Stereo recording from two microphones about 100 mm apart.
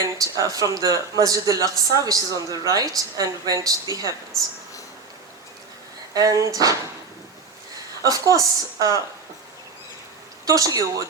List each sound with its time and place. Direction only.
0.0 s speech: 35° right (ahead or behind)
4.3 s speech: 5° left (ahead or behind)
6.1 s speech: 35° right (ahead or behind)
8.0 s speech: 35° right (ahead or behind)
10.4 s speech: 35° right (ahead or behind)